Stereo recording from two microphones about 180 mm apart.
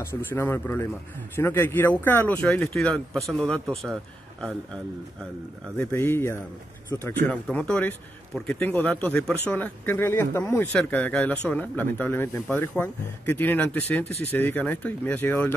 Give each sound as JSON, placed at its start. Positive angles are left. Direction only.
{"t": 0.0, "sound": "a man's voice", "side_deg": 15}
{"t": 5.8, "sound": "speech", "side_deg": 10}